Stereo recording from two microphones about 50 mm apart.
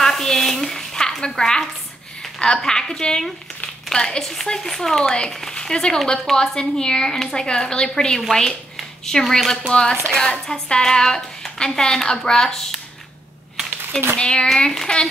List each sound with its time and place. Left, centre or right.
0.0 s a sound: centre
2.3 s speech: centre
9.7 s a woman's voice: centre
14.1 s a woman's voice: centre